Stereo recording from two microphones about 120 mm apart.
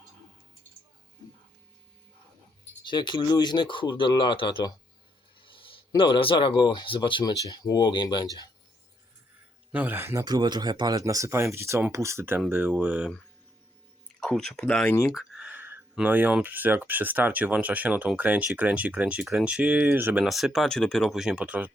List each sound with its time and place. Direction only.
2.8 s speech: 40° left (ahead or behind)
5.4 s a sound: 45° left (ahead or behind)
6.0 s speech: 45° left (ahead or behind)
7.4 s speech: 30° left (ahead or behind)
9.7 s speech: 15° right (ahead or behind)
10.2 s speech: 35° right (ahead or behind); by 13.1 s 10° right (ahead or behind)
14.2 s speech: 5° left (ahead or behind)
15.1 s a sound: 5° right (ahead or behind)
16.0 s speech: 15° right (ahead or behind)
20.2 s speech: centre (ahead or behind)